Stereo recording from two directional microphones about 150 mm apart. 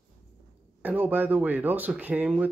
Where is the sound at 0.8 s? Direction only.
10° right (ahead or behind).